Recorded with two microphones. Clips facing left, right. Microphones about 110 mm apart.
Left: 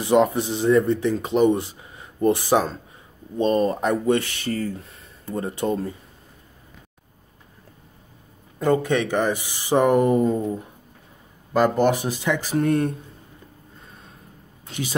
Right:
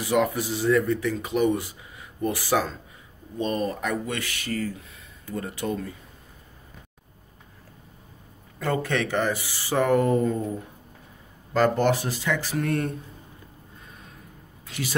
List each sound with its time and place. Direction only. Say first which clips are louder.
0.0 s speech: left 5 dB; 25° left (ahead or behind)
8.5 s speech: left 6 dB; 15° left (ahead or behind)
11.5 s speech: left 2 dB; 15° left (ahead or behind)
14.7 s speech: left 2 dB; 25° left (ahead or behind)